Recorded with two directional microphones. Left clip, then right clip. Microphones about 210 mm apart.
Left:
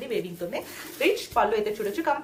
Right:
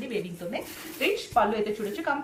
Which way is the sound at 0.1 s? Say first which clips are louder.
Left 3 dB; 50° left (ahead or behind).